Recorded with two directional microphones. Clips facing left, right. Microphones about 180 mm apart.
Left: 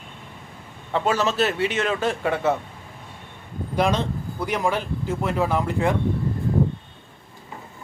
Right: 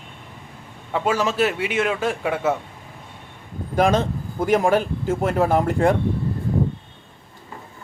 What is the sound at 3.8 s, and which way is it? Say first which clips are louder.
A man's voice: right 4 dB; 45° right (ahead or behind).